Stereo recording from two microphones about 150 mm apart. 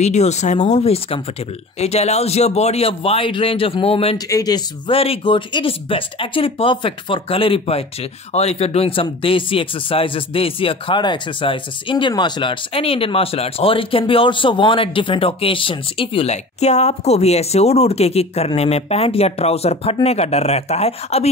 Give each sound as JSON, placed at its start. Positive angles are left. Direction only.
{"t": 0.0, "sound": "speech", "side_deg": 45}
{"t": 4.3, "sound": "speech", "side_deg": 25}